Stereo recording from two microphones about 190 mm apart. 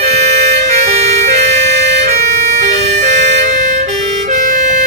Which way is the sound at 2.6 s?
35° right (ahead or behind).